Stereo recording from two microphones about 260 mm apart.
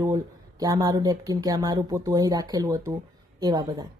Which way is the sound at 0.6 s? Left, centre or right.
Centre.